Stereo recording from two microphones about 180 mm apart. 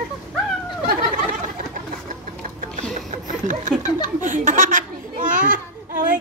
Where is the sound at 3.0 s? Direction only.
45° right (ahead or behind).